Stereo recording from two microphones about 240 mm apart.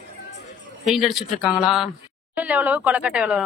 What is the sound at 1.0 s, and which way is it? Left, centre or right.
Speech, centre.